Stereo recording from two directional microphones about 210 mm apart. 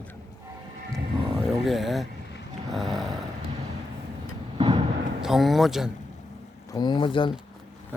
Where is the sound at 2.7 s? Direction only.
Centre (ahead or behind).